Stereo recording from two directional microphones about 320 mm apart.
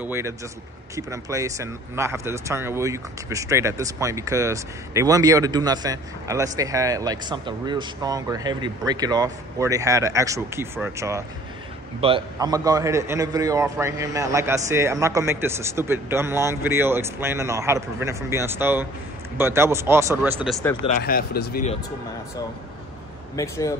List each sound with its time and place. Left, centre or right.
0.0 s speech: centre
20.8 s speech: left
23.3 s speech: centre